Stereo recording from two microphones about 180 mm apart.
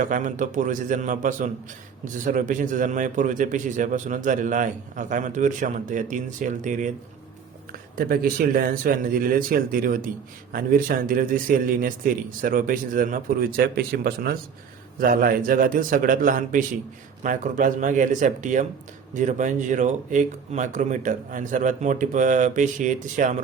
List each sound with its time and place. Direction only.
0.0 s speech: 45° right (ahead or behind)